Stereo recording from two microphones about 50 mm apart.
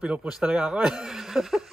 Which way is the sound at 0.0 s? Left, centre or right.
Right.